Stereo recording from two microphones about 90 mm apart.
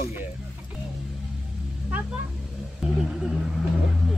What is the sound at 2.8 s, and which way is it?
Wild animals, 5° right (ahead or behind).